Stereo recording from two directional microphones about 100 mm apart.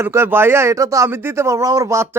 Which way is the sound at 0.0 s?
25° right (ahead or behind).